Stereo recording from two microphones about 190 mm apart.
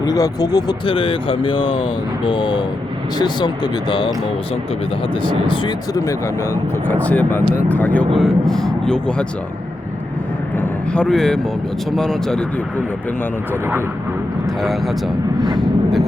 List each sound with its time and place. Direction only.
0.0 s speech: 20° left (ahead or behind)
5.2 s speech: 25° left (ahead or behind); by 9.2 s 5° left (ahead or behind)
10.6 s vehicle: 5° left (ahead or behind)
11.9 s speech: centre (ahead or behind)
14.6 s speech: centre (ahead or behind)